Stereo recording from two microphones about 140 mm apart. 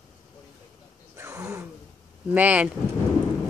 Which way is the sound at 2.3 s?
10° right (ahead or behind).